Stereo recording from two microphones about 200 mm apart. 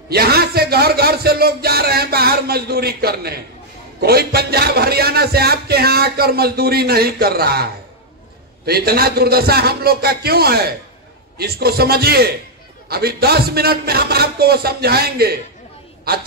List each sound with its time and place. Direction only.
0.1 s speech: 50° right (ahead or behind)
8.6 s speech: 50° right (ahead or behind)